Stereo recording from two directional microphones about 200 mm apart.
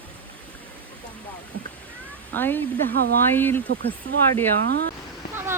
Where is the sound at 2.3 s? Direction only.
10° left (ahead or behind).